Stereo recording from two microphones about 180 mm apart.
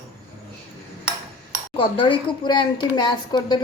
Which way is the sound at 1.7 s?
30° left (ahead or behind).